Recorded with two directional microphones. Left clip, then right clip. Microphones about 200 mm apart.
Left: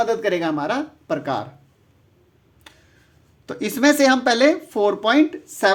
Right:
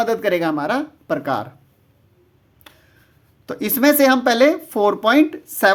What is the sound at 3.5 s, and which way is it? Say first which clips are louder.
Speech: right 1 dB; 20° right (ahead or behind).